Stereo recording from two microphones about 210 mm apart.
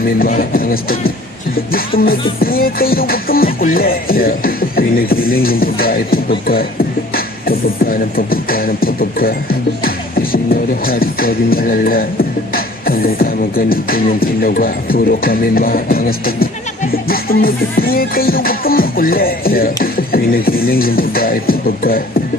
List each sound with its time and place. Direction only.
0.0 s music: 45° left (ahead or behind)